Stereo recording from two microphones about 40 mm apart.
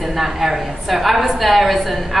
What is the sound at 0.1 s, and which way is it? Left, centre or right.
A woman's voice, centre.